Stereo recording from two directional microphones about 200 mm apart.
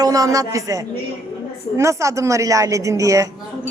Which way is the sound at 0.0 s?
15° right (ahead or behind).